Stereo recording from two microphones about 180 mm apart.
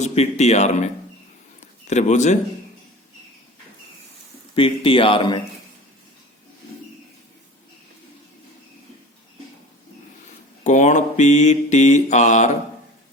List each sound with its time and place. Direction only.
0.0 s mantra: 40° left (ahead or behind)
1.9 s mantra: 40° left (ahead or behind)
4.5 s speech: 30° left (ahead or behind)
10.6 s mantra: 40° left (ahead or behind)